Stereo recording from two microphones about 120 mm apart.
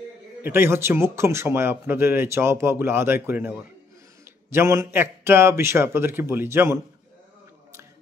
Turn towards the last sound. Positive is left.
turn(degrees=-20)  # may be behind; listen again after turning